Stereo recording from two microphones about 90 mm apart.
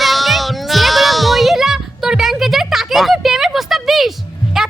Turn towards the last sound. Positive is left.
turn(degrees=-5)  # may be behind; listen again after turning